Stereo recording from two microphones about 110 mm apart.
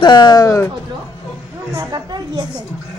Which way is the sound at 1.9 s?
40° right (ahead or behind).